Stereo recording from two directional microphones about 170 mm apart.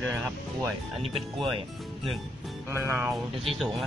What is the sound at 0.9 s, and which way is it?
Speech, 35° right (ahead or behind).